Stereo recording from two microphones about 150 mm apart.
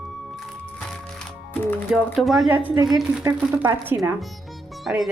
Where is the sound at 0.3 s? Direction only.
5° left (ahead or behind).